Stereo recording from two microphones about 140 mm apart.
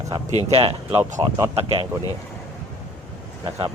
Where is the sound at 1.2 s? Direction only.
25° right (ahead or behind).